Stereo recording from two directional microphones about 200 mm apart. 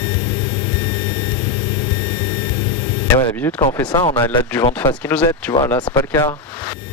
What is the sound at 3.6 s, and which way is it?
Speech, 20° left (ahead or behind).